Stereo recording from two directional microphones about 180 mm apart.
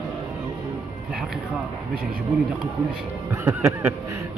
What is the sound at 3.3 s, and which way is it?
Speech, 15° right (ahead or behind).